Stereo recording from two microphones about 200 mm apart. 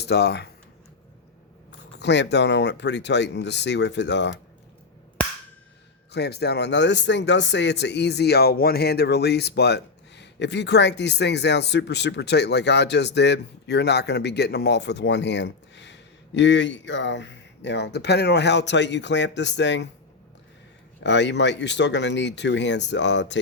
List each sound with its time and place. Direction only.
0.0 s speech: 55° left (ahead or behind)
2.0 s speech: 60° left (ahead or behind)
6.1 s speech: 55° left (ahead or behind)
21.0 s speech: 60° left (ahead or behind)